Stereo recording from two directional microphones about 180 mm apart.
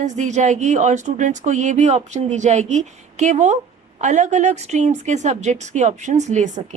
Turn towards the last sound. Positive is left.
turn(degrees=-45)  # may be behind; listen again after turning